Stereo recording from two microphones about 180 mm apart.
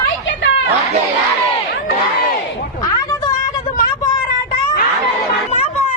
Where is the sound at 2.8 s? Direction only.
20° left (ahead or behind).